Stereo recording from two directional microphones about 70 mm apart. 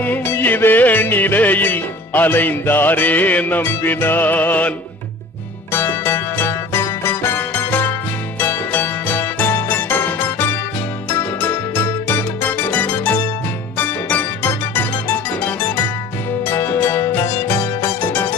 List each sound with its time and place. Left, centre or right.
0.0 s music: left
5.7 s music: left